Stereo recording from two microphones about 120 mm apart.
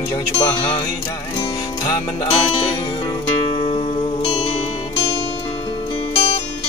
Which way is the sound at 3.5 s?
50° left (ahead or behind).